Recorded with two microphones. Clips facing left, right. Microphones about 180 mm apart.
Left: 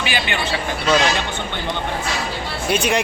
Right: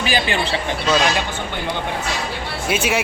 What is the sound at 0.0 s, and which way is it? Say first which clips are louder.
Speech: right 3 dB; 35° right (ahead or behind).